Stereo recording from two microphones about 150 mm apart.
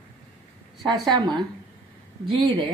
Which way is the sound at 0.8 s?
30° right (ahead or behind).